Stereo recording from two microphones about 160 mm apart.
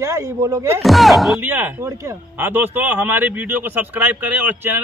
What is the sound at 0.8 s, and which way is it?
Speech, centre (ahead or behind).